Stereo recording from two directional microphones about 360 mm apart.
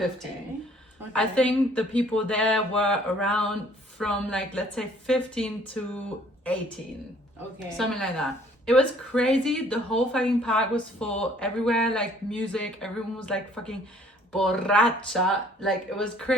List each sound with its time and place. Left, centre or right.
1.1 s a woman's voice: centre
7.8 s a woman's voice: centre